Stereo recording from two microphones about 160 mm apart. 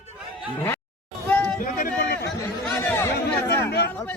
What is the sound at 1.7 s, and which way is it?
Speech, 65° left (ahead or behind).